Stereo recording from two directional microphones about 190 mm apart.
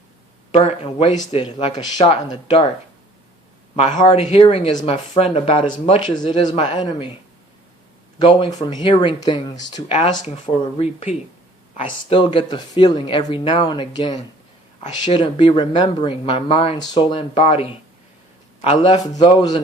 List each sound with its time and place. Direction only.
0.5 s a man's voice: 30° left (ahead or behind)
3.9 s speech: 25° left (ahead or behind)
8.2 s speech: 25° left (ahead or behind)